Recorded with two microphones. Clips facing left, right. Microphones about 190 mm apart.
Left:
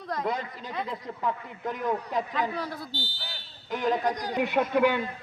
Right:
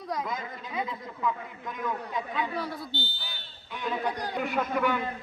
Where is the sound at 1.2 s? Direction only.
35° left (ahead or behind).